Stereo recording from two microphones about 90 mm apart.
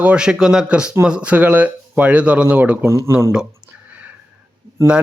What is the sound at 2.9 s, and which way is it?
Speech, 30° right (ahead or behind).